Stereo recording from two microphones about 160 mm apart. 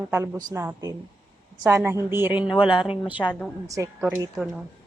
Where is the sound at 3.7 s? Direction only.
20° right (ahead or behind).